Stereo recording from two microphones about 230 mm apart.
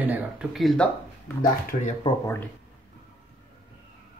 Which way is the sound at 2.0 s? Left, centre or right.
Left.